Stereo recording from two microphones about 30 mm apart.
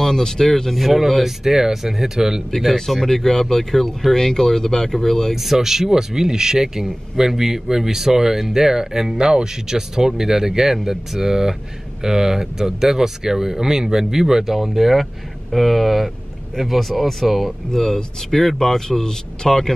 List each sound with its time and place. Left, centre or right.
0.0 s speech: centre
0.7 s speech: centre
1.4 s speech: centre
3.0 s speech: centre
5.3 s speech: centre
17.7 s speech: centre